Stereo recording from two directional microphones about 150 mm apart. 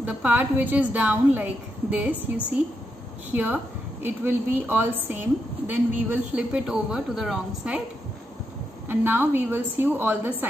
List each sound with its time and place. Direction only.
0.0 s a woman's voice: 10° right (ahead or behind)
8.8 s a woman's voice: 15° right (ahead or behind)